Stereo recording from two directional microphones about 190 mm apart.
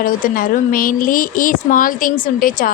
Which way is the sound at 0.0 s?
50° left (ahead or behind).